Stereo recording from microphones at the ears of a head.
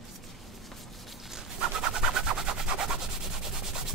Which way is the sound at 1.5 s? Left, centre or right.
Right.